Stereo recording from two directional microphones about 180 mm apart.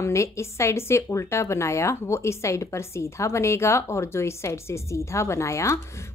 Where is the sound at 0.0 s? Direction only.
15° left (ahead or behind).